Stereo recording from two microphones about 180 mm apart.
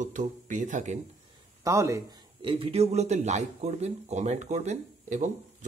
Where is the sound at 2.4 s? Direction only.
30° right (ahead or behind).